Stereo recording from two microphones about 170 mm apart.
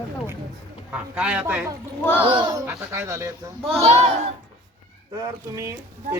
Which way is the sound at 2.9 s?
15° right (ahead or behind).